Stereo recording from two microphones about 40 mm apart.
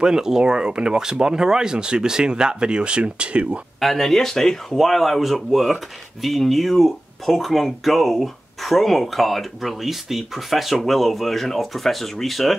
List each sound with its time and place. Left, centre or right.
0.0 s speech: centre
3.8 s speech: centre